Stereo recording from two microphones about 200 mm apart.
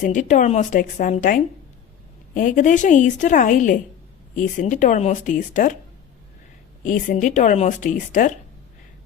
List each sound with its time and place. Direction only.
0.0 s a woman's voice: 40° left (ahead or behind)
6.8 s a woman's voice: 40° left (ahead or behind)